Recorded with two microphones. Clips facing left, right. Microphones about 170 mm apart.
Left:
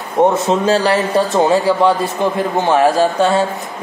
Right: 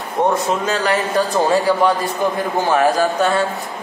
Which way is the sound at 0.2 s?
30° left (ahead or behind).